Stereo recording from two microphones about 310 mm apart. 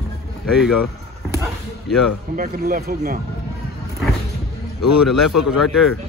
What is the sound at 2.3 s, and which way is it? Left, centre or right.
Speech, right.